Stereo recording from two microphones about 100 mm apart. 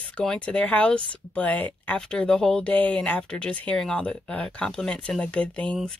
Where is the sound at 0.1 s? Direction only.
10° left (ahead or behind).